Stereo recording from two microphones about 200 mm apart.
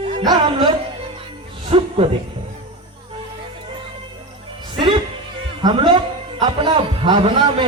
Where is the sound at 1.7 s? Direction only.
30° right (ahead or behind).